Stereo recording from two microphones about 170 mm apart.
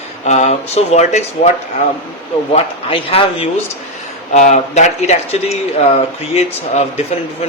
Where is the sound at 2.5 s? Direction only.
35° left (ahead or behind).